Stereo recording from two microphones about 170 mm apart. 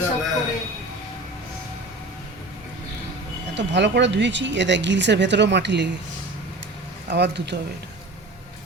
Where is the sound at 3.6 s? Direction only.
90° right.